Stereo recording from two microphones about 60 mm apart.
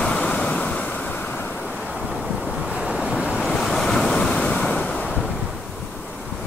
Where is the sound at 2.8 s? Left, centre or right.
Centre.